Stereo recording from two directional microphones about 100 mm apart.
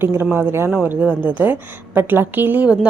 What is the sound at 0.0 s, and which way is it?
A woman's voice, 25° right (ahead or behind).